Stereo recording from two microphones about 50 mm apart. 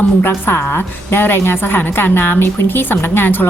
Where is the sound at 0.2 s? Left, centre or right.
Left.